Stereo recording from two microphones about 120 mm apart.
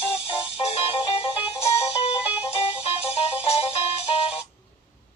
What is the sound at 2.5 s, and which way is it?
Music, 55° left (ahead or behind).